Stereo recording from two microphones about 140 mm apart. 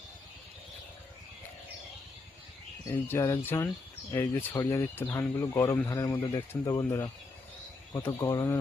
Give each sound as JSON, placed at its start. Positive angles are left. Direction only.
{"t": 2.8, "sound": "speech", "side_deg": 15}